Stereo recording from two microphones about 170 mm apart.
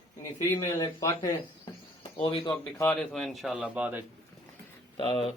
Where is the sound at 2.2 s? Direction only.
30° left (ahead or behind).